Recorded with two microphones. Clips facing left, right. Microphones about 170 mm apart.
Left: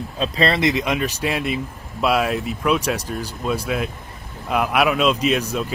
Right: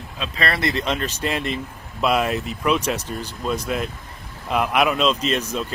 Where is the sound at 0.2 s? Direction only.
25° left (ahead or behind).